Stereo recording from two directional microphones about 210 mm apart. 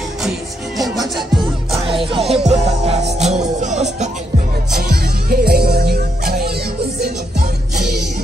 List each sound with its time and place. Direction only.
0.2 s music: centre (ahead or behind)
2.0 s music: 25° right (ahead or behind)
4.7 s music: 45° right (ahead or behind)